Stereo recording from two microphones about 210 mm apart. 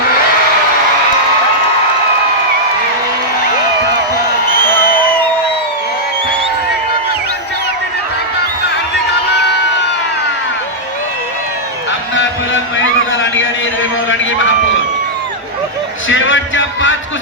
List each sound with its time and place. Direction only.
4.8 s crowd: 45° left (ahead or behind)
12.7 s a sound: 65° left (ahead or behind)
16.0 s music: 65° left (ahead or behind)